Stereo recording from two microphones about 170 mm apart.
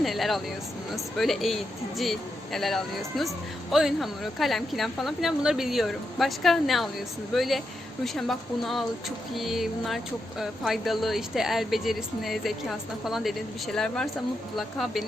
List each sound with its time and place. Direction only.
0.0 s speech: centre (ahead or behind)